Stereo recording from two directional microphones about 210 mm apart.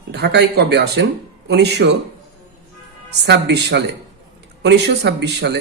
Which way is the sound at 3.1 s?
55° right (ahead or behind).